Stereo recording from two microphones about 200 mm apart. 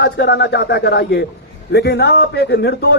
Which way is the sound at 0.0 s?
55° left (ahead or behind).